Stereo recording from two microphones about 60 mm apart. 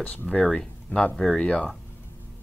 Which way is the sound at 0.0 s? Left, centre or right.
Left.